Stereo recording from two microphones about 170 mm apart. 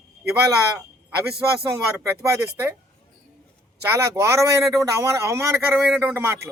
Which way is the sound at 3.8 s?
15° right (ahead or behind).